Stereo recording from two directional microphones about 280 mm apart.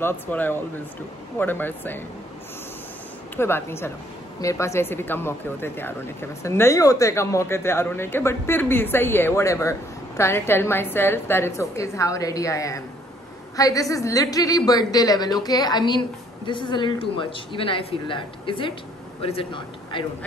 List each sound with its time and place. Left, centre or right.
0.0 s speech: centre
3.3 s speech: centre